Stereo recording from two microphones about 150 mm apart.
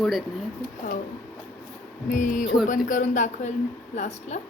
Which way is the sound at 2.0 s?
60° left (ahead or behind).